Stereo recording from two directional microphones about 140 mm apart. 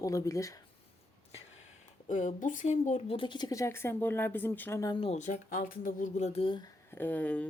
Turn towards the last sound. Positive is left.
turn(degrees=10)  # may be behind; listen again after turning